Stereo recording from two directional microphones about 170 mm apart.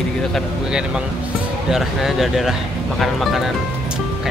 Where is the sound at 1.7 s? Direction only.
Centre (ahead or behind).